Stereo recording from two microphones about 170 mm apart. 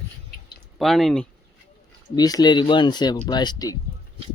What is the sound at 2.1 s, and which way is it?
Speech, 20° left (ahead or behind).